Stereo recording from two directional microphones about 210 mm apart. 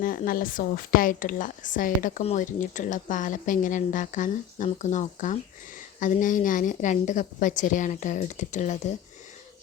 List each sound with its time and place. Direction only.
0.0 s a woman's voice: 45° left (ahead or behind)